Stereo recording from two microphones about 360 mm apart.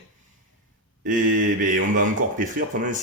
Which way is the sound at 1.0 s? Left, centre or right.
Right.